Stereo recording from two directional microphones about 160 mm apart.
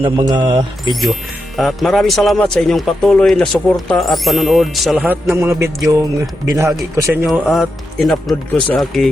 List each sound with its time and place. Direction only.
0.0 s speech: 30° right (ahead or behind)
1.5 s speech: centre (ahead or behind)
5.0 s music: 15° right (ahead or behind)
7.3 s speech: centre (ahead or behind)